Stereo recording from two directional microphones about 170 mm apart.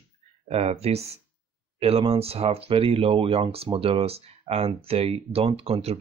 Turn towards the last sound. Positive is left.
turn(degrees=-35)  # may be behind; listen again after turning